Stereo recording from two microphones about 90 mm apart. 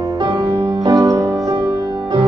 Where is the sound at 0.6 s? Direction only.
35° right (ahead or behind); by 2.2 s 50° right (ahead or behind).